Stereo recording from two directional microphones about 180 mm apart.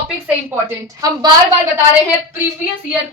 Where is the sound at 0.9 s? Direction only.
20° right (ahead or behind).